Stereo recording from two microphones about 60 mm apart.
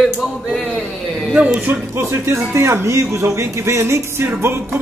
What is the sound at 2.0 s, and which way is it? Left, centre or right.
Speech, right.